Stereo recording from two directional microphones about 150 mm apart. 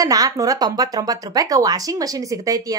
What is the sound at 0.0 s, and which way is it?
Speech, 25° right (ahead or behind).